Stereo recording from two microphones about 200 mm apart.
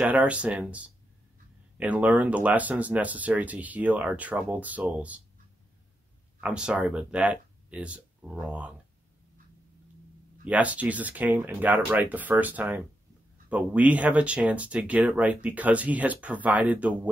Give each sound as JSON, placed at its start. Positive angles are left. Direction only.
{"t": 0.0, "sound": "speech", "side_deg": -5}
{"t": 6.4, "sound": "speech", "side_deg": -5}
{"t": 10.4, "sound": "speech", "side_deg": -5}